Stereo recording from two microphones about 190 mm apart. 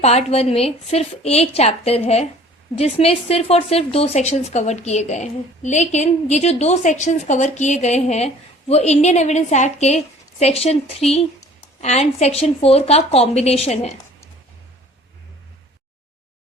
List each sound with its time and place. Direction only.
0.0 s speech: 35° left (ahead or behind)